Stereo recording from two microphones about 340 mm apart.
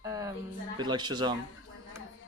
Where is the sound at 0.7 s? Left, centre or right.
Centre.